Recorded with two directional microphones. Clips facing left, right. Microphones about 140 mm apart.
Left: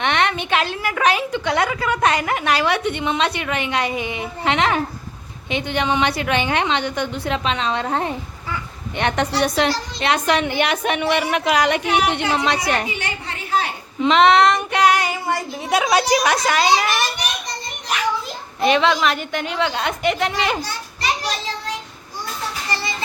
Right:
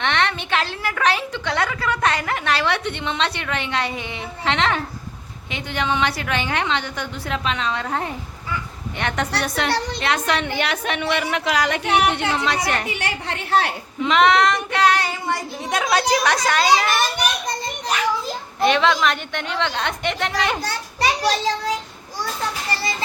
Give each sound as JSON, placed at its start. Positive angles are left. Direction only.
{"t": 0.0, "sound": "a woman's voice", "side_deg": 15}
{"t": 9.6, "sound": "a woman's voice", "side_deg": -65}
{"t": 10.0, "sound": "a woman's voice", "side_deg": 20}
{"t": 12.9, "sound": "a woman's voice", "side_deg": -80}
{"t": 14.0, "sound": "a woman's voice", "side_deg": 25}
{"t": 18.6, "sound": "a woman's voice", "side_deg": 0}